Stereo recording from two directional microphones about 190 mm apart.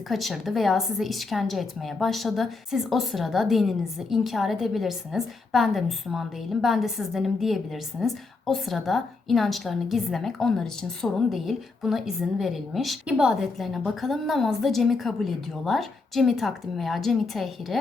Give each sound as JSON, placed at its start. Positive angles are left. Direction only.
{"t": 0.1, "sound": "a woman's voice", "side_deg": 0}